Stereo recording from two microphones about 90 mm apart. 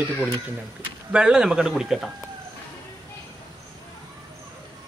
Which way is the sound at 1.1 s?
10° right (ahead or behind).